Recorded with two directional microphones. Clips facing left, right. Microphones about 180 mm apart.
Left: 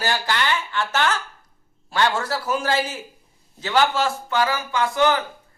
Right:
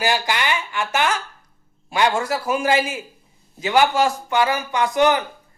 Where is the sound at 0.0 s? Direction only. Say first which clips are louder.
Right 2 dB; 10° right (ahead or behind).